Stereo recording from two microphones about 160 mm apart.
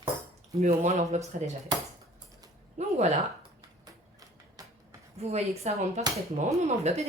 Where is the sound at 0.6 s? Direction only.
45° right (ahead or behind).